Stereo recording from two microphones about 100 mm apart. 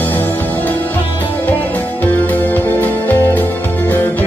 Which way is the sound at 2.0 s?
20° left (ahead or behind).